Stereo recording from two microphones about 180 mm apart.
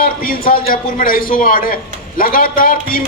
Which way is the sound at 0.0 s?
55° left (ahead or behind).